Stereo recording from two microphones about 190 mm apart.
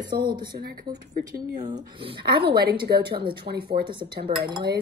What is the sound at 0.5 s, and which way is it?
Speech, 55° right (ahead or behind).